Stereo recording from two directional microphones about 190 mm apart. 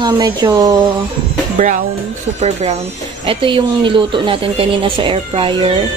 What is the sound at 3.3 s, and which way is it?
Speech, 25° right (ahead or behind).